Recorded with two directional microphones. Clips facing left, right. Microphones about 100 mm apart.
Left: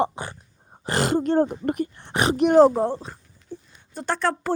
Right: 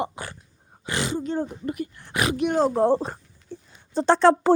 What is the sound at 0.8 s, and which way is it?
Speech, 45° left (ahead or behind).